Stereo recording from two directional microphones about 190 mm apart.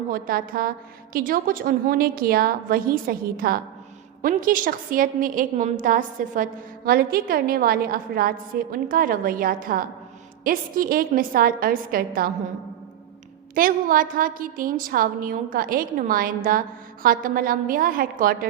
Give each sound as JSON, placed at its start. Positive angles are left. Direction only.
{"t": 0.1, "sound": "a woman's voice", "side_deg": -50}
{"t": 13.6, "sound": "a woman's voice", "side_deg": -50}